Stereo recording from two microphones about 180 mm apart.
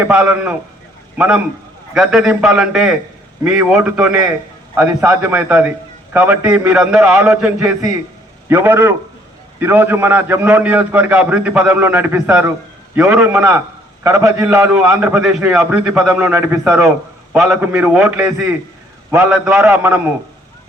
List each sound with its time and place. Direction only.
0.0 s a man's voice: 5° right (ahead or behind)